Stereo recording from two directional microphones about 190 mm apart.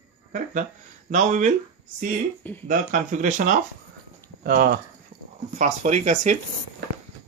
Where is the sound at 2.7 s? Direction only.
45° right (ahead or behind).